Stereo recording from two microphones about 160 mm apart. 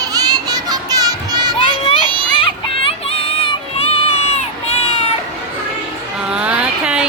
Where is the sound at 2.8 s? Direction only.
35° left (ahead or behind).